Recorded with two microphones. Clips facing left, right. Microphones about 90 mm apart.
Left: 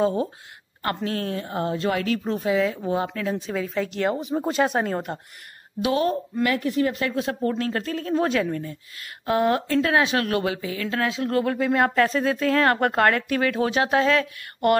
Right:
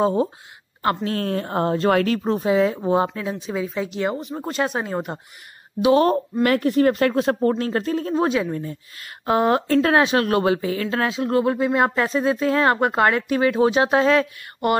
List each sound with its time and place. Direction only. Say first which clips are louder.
0.0 s speech: right 3 dB; 25° right (ahead or behind)
1.0 s speech: right 3 dB; 45° right (ahead or behind)
2.2 s speech: right 4 dB; 30° right (ahead or behind)
3.2 s speech: right 1 dB; 15° right (ahead or behind)
4.2 s speech: left 2 dB; 5° left (ahead or behind)
4.8 s speech: even; 10° right (ahead or behind)
6.4 s speech: right 5 dB; 50° right (ahead or behind)
7.5 s speech: right 4 dB; 30° right (ahead or behind)
8.3 s speech: right 1 dB; 15° right (ahead or behind)
8.5 s speech: right 2 dB; 30° right (ahead or behind)
9.7 s speech: right 4 dB; 40° right (ahead or behind)